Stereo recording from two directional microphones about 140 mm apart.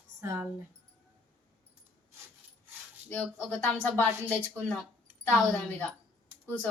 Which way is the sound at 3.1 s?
10° left (ahead or behind).